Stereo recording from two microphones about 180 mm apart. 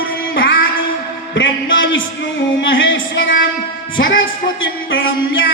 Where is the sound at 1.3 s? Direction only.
90° left.